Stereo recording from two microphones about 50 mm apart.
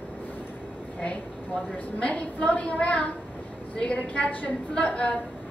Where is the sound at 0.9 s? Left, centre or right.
Left.